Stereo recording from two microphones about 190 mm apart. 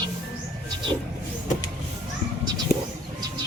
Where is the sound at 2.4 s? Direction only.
20° right (ahead or behind).